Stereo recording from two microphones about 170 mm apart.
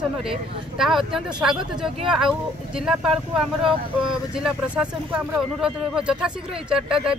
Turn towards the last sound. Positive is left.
turn(degrees=-5)  # may be behind; listen again after turning